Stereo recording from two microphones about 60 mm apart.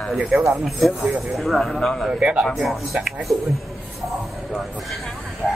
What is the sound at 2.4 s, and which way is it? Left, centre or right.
Speech, centre.